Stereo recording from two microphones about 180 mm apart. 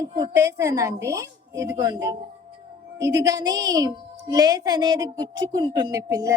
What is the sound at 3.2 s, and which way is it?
A woman's voice, 20° right (ahead or behind).